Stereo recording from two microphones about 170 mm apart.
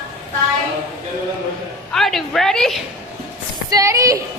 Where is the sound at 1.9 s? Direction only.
Centre (ahead or behind).